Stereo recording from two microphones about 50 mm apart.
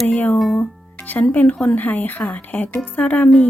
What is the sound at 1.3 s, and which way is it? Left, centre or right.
Speech, left.